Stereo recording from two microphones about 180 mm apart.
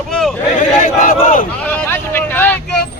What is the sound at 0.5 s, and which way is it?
Speech, 50° left (ahead or behind).